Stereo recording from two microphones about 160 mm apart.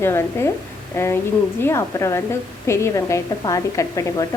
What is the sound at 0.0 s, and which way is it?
A woman's voice, 15° left (ahead or behind).